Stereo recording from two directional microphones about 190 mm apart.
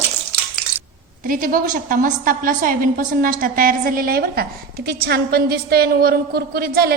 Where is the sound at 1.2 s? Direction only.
50° right (ahead or behind).